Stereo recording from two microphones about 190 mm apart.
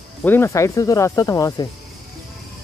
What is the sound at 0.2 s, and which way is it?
Speech, 10° left (ahead or behind).